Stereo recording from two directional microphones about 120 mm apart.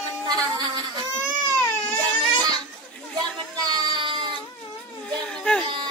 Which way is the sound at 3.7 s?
40° right (ahead or behind).